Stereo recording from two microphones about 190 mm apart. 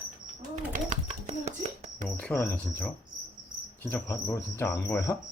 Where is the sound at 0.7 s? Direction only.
35° right (ahead or behind).